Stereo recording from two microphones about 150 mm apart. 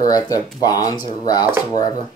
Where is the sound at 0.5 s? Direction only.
25° left (ahead or behind).